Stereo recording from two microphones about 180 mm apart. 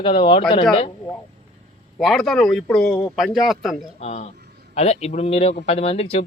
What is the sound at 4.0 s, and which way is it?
Speech, 35° left (ahead or behind).